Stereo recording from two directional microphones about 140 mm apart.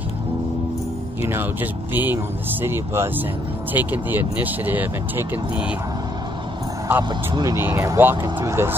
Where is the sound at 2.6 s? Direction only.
15° right (ahead or behind).